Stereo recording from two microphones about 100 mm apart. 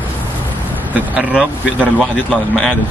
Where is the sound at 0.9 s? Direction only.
15° right (ahead or behind).